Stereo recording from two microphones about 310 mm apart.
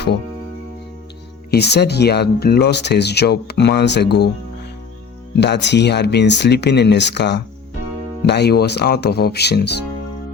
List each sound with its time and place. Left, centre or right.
1.5 s speech: left
5.4 s speech: left